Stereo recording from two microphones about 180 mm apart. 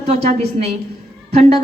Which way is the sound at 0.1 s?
35° right (ahead or behind).